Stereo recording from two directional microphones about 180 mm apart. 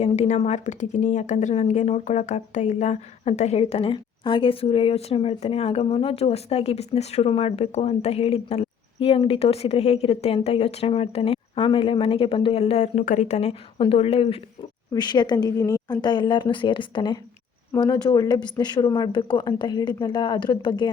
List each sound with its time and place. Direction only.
0.0 s a woman's voice: 40° left (ahead or behind)